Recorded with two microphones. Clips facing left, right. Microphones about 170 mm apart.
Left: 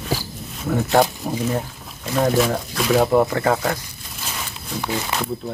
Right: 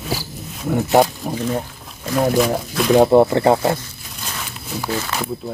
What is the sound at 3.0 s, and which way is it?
Speech, 25° right (ahead or behind).